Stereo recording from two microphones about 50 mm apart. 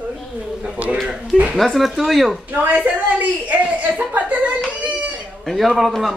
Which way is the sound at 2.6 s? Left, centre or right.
Right.